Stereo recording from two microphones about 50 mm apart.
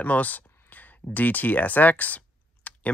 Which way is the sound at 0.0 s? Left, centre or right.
Left.